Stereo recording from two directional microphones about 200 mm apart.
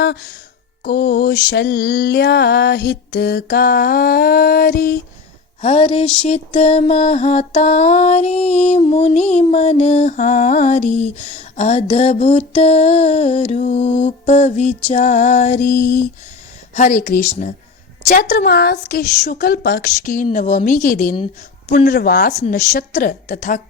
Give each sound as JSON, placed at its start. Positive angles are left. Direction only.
{"t": 0.0, "sound": "speech", "side_deg": 55}
{"t": 0.9, "sound": "lullaby", "side_deg": 55}
{"t": 5.6, "sound": "a sound", "side_deg": 30}
{"t": 6.2, "sound": "mantra", "side_deg": 30}
{"t": 18.1, "sound": "lullaby", "side_deg": 45}
{"t": 19.2, "sound": "mantra", "side_deg": 45}
{"t": 21.8, "sound": "lullaby", "side_deg": 50}
{"t": 22.3, "sound": "mantra", "side_deg": 35}
{"t": 22.7, "sound": "lullaby", "side_deg": 45}